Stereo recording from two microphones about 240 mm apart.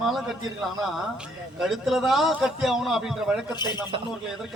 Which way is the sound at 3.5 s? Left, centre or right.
Centre.